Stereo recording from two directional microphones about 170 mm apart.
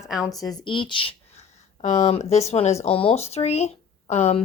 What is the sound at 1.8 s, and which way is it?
Speech, 45° left (ahead or behind).